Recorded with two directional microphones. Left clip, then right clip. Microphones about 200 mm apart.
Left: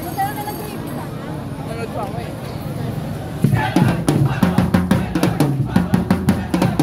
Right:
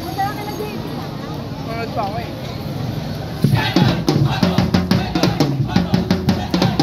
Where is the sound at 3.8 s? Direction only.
40° left (ahead or behind).